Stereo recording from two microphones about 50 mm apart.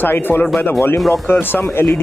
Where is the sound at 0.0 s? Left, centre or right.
Left.